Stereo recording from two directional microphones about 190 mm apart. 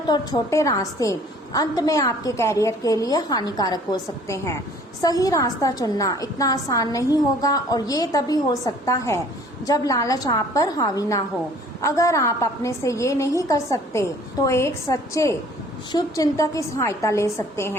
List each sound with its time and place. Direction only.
0.1 s a woman's voice: 20° left (ahead or behind)